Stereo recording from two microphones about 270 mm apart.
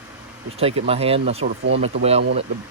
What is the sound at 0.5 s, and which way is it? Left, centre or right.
Speech, right.